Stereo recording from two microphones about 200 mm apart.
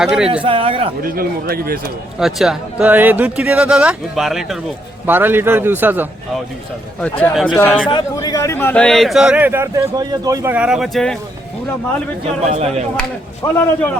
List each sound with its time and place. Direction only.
0.0 s a man's voice: centre (ahead or behind)
0.4 s a man's voice: 25° right (ahead or behind)
1.0 s speech: 50° right (ahead or behind)
2.1 s a man's voice: centre (ahead or behind)
7.0 s speech: 5° left (ahead or behind)
7.9 s a man's voice: 20° left (ahead or behind); by 11.2 s centre (ahead or behind)
12.4 s speech: 30° right (ahead or behind)
13.4 s speech: 15° left (ahead or behind)